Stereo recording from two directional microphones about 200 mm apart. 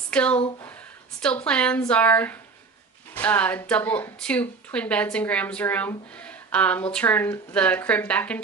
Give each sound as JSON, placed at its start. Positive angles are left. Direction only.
{"t": 0.1, "sound": "speech", "side_deg": 5}